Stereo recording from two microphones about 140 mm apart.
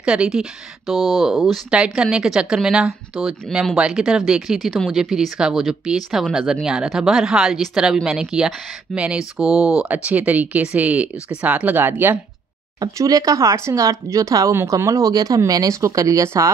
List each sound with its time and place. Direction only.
0.0 s speech: 5° right (ahead or behind)
12.8 s speech: 25° right (ahead or behind)